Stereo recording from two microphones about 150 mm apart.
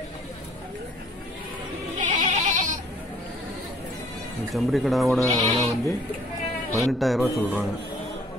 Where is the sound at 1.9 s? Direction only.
55° right (ahead or behind).